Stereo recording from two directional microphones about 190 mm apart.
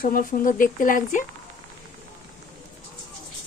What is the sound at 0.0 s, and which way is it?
Speech, 50° left (ahead or behind).